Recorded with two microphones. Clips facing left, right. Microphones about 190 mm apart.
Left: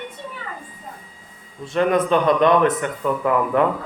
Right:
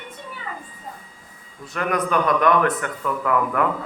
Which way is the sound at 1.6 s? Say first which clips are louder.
Left 6 dB; 25° left (ahead or behind).